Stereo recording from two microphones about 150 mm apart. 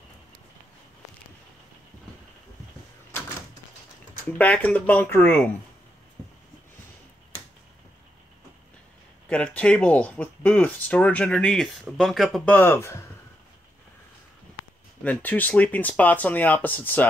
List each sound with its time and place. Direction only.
4.4 s speech: 10° left (ahead or behind)
9.3 s speech: 10° left (ahead or behind)
12.5 s speech: 15° left (ahead or behind)
15.0 s speech: 10° left (ahead or behind)